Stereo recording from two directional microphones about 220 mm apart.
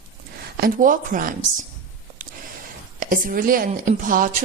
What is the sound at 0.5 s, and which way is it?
Speech, 40° right (ahead or behind).